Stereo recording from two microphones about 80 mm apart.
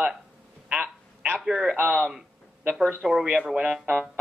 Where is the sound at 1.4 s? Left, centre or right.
Centre.